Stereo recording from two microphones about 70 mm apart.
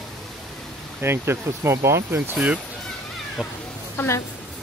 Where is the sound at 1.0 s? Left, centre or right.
Right.